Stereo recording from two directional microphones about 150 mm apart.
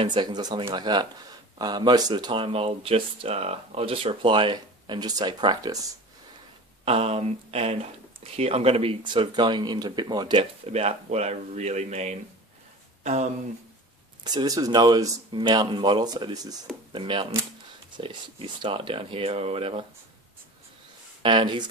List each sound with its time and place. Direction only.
0.0 s speech: 30° right (ahead or behind)
6.8 s speech: 40° right (ahead or behind)
10.7 s speech: 45° right (ahead or behind)
14.2 s speech: 25° right (ahead or behind)
21.2 s speech: 35° right (ahead or behind)